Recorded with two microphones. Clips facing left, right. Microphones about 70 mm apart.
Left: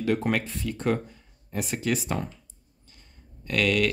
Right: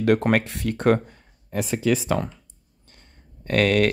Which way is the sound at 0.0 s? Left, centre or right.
Right.